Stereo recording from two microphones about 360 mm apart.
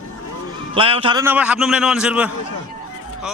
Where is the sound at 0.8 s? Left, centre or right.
Centre.